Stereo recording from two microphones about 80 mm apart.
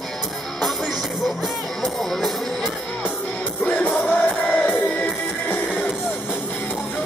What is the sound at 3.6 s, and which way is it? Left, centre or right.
Music, centre.